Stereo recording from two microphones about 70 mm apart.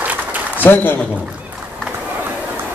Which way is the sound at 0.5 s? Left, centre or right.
Left.